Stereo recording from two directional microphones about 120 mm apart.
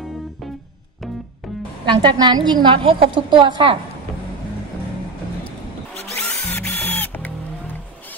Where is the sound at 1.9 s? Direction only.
40° right (ahead or behind).